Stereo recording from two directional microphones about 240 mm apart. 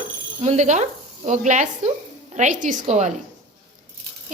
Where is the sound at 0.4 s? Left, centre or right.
Right.